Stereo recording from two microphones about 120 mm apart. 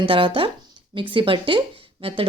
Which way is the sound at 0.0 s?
45° right (ahead or behind).